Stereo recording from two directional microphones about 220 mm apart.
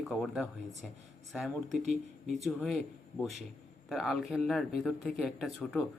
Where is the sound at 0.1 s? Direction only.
Centre (ahead or behind).